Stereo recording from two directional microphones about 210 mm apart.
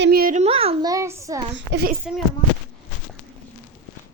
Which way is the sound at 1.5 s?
55° right (ahead or behind).